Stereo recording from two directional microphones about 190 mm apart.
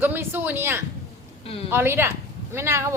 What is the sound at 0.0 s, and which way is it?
Speech, 10° right (ahead or behind).